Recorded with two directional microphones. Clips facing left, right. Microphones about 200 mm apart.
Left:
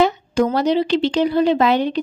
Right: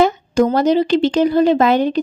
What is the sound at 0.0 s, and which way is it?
Speech, 45° right (ahead or behind).